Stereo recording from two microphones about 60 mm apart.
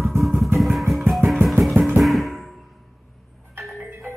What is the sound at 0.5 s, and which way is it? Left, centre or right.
Music, centre.